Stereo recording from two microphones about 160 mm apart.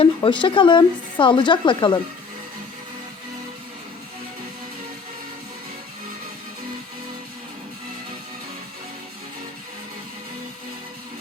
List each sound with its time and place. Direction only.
0.0 s speech: 30° left (ahead or behind)